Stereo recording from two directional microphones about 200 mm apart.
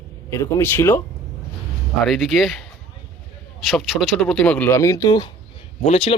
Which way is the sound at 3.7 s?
Centre (ahead or behind).